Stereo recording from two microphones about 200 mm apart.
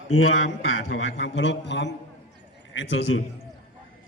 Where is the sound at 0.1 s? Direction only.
90° left; by 3.2 s 70° left (ahead or behind).